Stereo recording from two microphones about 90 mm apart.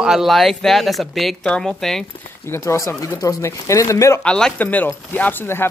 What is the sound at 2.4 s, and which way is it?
Speech, 30° left (ahead or behind).